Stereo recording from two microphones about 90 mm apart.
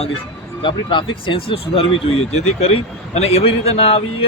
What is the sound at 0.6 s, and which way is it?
Speech, 70° left (ahead or behind).